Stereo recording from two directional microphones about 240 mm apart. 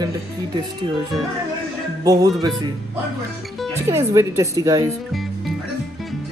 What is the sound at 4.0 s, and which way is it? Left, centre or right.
Speech, centre.